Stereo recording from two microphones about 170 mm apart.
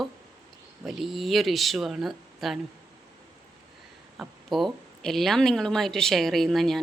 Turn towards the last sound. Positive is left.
turn(degrees=0)  # may be behind; listen again after turning